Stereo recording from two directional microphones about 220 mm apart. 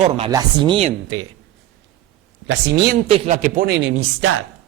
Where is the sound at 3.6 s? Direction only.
50° right (ahead or behind).